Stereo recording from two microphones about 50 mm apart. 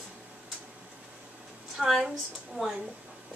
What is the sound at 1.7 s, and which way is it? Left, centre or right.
Speech, centre.